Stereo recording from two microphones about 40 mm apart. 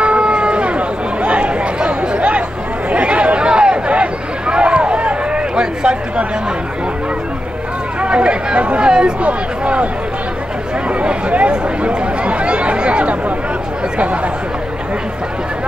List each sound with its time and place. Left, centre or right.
0.0 s chatter: right
8.0 s chatter: right
9.2 s a sound: right
10.9 s chatter: right